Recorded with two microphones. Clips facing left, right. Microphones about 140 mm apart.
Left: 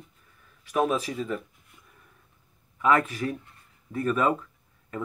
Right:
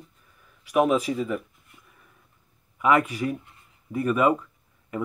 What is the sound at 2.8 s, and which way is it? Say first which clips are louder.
Speech: right 2 dB; 10° right (ahead or behind).